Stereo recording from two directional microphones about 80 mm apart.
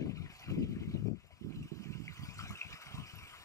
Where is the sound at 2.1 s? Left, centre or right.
Left.